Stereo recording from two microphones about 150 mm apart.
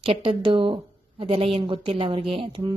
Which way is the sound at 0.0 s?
40° right (ahead or behind).